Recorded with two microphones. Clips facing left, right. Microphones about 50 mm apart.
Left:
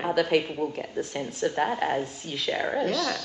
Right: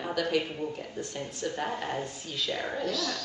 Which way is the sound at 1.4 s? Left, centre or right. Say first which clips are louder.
Left 7 dB; left.